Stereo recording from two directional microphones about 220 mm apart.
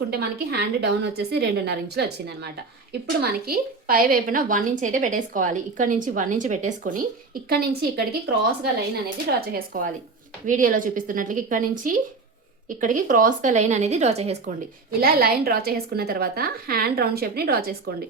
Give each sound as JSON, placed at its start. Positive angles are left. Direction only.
{"t": 0.1, "sound": "a woman's voice", "side_deg": -45}
{"t": 9.2, "sound": "a woman's voice", "side_deg": -45}
{"t": 15.0, "sound": "a woman's voice", "side_deg": -45}